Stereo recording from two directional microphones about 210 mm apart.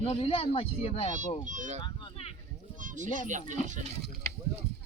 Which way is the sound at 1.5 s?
35° right (ahead or behind).